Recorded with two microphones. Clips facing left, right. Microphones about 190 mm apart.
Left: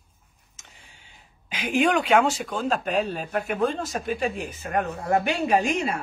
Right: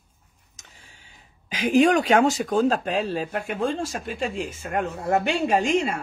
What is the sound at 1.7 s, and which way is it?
Speech, 40° right (ahead or behind).